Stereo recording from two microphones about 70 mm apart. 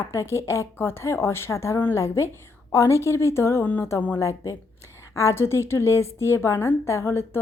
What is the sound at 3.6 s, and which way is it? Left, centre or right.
Speech, left.